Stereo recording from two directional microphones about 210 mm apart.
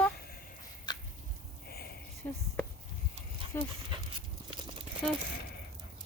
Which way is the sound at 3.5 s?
10° left (ahead or behind).